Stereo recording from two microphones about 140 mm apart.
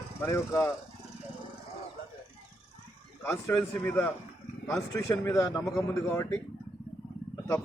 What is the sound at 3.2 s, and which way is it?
A man's voice, 20° left (ahead or behind).